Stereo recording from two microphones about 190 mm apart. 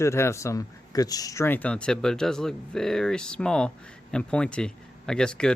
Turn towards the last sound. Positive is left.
turn(degrees=5)  # may be behind; listen again after turning